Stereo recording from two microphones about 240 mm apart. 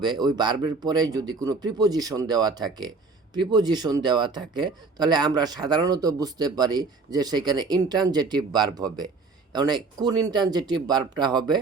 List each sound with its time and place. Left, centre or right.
0.0 s speech: centre